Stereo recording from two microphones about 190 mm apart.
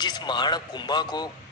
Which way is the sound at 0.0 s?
20° left (ahead or behind).